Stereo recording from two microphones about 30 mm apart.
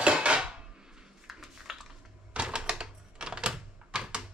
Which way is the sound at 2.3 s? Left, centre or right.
Right.